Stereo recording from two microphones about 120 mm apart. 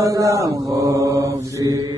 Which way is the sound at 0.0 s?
25° right (ahead or behind).